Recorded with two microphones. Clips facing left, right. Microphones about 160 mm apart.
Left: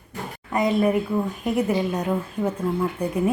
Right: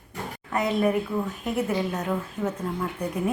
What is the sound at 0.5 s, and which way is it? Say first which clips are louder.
Speech: left 3 dB; 10° left (ahead or behind).